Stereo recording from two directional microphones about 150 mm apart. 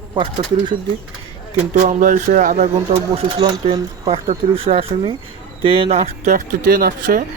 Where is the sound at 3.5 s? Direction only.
25° right (ahead or behind).